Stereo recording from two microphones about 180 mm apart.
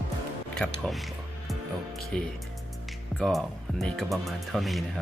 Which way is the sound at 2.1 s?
5° left (ahead or behind).